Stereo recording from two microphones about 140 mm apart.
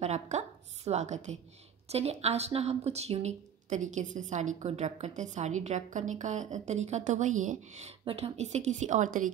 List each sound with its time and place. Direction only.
0.0 s a woman's voice: 50° right (ahead or behind)
8.0 s speech: 40° right (ahead or behind); by 9.3 s 65° right (ahead or behind)